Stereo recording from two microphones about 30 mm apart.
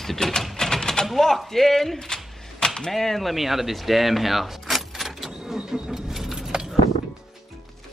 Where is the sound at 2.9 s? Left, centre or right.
Centre.